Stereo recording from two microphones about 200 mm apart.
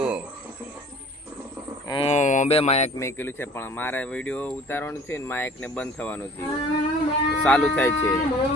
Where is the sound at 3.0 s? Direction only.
15° left (ahead or behind).